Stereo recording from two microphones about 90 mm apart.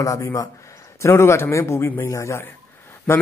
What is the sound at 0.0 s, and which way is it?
Speech, 40° left (ahead or behind).